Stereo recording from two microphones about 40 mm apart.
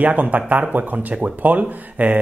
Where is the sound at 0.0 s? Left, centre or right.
Right.